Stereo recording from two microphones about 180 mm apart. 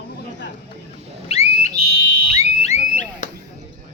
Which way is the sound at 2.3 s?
40° left (ahead or behind).